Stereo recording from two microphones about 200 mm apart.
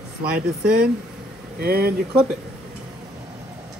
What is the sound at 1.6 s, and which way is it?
Speech, 50° right (ahead or behind).